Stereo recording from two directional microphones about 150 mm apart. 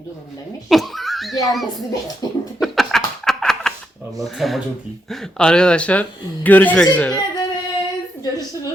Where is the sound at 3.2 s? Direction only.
5° left (ahead or behind).